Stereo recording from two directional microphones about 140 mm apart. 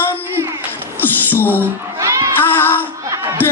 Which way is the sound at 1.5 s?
20° right (ahead or behind).